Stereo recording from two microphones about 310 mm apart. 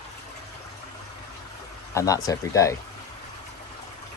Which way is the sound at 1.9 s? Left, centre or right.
Centre.